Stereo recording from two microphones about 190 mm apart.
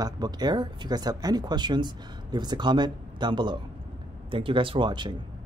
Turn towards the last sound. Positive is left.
turn(degrees=-25)  # may be behind; listen again after turning